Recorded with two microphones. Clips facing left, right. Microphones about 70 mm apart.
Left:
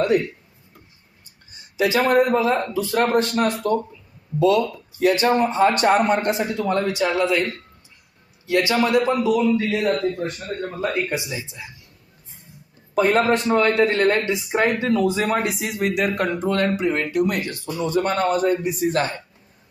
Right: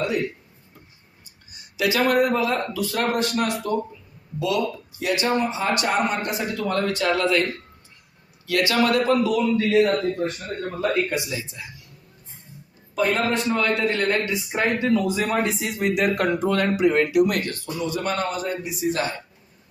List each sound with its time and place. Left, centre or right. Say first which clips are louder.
1.5 s a man's voice: left 2 dB; left
6.3 s a man's voice: left 3 dB; left
9.8 s speech: even; centre
10.8 s a man's voice: right 2 dB; left
13.6 s a man's voice: left 5 dB; left
15.4 s speech: left 1 dB; centre
17.8 s speech: left 5 dB; left